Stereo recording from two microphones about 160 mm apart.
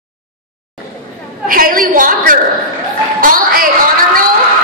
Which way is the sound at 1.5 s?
60° right (ahead or behind).